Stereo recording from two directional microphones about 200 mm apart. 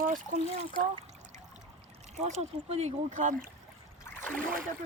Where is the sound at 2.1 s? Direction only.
35° right (ahead or behind).